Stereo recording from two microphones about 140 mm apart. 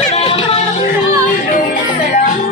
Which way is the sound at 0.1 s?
45° left (ahead or behind).